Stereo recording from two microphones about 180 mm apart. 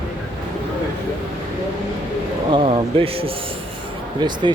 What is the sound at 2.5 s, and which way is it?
Speech, 30° right (ahead or behind).